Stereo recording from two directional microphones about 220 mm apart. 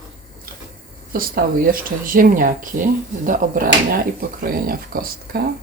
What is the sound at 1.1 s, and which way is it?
Speech, 40° right (ahead or behind).